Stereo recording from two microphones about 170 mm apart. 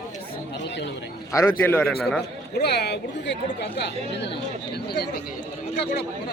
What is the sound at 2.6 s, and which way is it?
Speech, 70° left (ahead or behind).